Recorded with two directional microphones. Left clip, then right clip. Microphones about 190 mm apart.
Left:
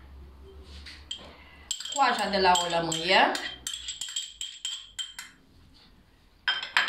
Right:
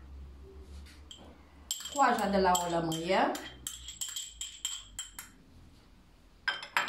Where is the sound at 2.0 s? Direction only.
15° right (ahead or behind).